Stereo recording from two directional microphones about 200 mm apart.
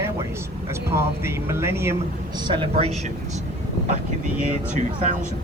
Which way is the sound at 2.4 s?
25° right (ahead or behind).